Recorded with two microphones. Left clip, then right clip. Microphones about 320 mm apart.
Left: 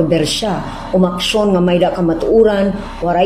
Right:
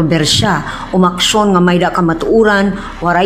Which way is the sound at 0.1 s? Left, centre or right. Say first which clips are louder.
Right 3 dB; right.